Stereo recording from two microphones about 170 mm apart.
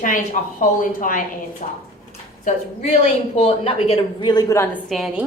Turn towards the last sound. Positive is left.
turn(degrees=0)  # may be behind; listen again after turning